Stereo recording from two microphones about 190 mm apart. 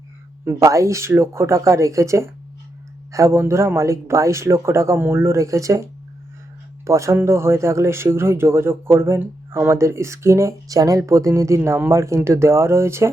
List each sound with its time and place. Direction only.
0.4 s speech: 15° right (ahead or behind)